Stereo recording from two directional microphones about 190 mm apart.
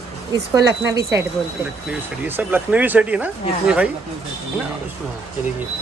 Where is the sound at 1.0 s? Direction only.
15° right (ahead or behind).